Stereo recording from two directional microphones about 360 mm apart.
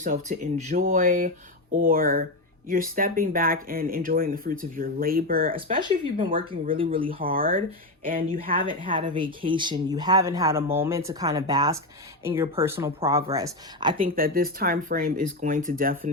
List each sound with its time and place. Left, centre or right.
0.0 s speech: right
14.0 s speech: right